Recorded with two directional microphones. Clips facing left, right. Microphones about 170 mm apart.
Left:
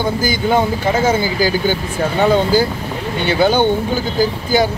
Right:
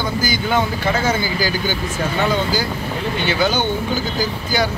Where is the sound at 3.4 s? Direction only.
55° left (ahead or behind).